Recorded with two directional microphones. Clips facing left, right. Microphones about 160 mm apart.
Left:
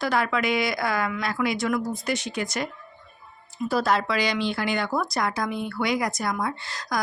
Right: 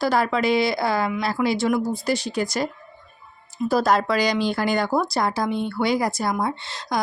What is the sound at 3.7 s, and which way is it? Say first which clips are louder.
Speech: right 4 dB; 40° right (ahead or behind).